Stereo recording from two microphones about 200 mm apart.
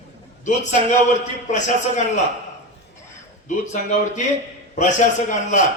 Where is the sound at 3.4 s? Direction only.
40° left (ahead or behind).